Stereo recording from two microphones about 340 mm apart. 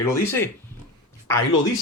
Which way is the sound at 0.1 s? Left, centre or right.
Centre.